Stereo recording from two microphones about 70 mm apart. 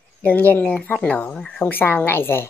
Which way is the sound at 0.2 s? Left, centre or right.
Left.